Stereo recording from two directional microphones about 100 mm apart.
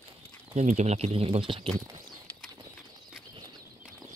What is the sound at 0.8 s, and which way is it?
Speech, 90° right.